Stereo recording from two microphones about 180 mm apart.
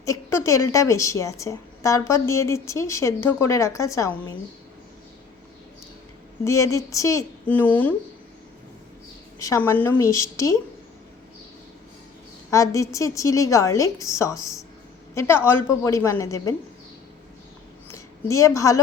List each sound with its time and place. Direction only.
0.0 s a woman's voice: 15° left (ahead or behind)
6.4 s a woman's voice: 15° left (ahead or behind)
9.4 s a woman's voice: 15° left (ahead or behind)
12.5 s a woman's voice: 20° left (ahead or behind)
17.9 s a woman's voice: 15° left (ahead or behind)